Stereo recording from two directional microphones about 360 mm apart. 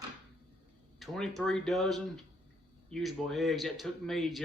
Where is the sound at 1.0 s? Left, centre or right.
Centre.